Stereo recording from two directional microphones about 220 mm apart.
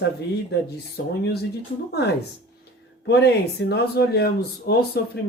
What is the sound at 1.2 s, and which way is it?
Speech, 45° left (ahead or behind).